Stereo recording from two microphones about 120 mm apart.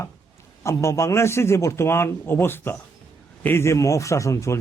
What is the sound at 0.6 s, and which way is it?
A man's voice, 25° left (ahead or behind).